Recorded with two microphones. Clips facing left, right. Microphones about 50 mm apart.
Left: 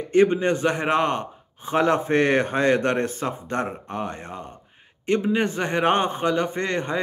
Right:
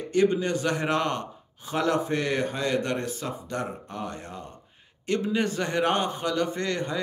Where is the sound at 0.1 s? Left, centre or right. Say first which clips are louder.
Left 5 dB; left.